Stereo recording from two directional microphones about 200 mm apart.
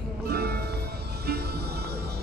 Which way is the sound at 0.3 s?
55° right (ahead or behind).